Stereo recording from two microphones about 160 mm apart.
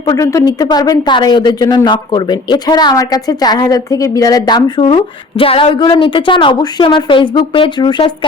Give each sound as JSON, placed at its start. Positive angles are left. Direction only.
{"t": 0.0, "sound": "a woman's voice", "side_deg": 20}